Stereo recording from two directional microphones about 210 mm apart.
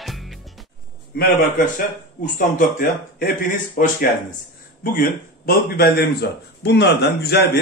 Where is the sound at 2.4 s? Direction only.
40° left (ahead or behind).